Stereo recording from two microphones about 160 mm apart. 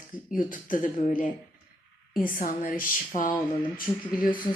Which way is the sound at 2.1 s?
60° left (ahead or behind).